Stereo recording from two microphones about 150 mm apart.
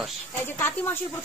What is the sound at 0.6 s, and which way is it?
Speech, 15° left (ahead or behind).